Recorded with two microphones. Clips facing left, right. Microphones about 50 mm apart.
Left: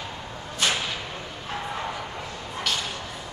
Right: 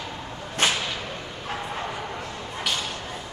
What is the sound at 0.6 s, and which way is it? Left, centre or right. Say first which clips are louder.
Whip: right 2 dB; right.